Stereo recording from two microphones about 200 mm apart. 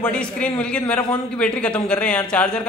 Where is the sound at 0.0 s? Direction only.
5° left (ahead or behind).